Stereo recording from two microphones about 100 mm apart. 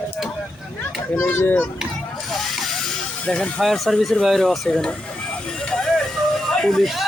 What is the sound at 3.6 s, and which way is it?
Speech, centre (ahead or behind).